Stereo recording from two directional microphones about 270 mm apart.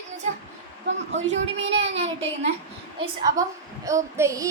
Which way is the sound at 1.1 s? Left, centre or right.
Right.